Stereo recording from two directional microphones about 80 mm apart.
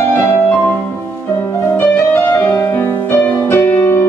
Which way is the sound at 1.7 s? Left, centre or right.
Left.